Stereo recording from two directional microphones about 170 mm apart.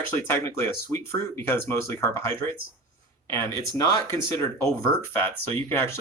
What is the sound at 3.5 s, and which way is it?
Speech, 20° left (ahead or behind).